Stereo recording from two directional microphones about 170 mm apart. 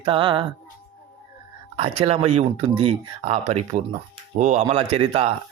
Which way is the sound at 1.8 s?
35° right (ahead or behind).